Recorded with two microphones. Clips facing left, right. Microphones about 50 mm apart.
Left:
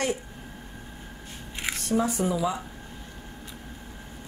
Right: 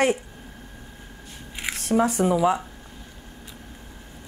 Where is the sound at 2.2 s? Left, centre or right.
Right.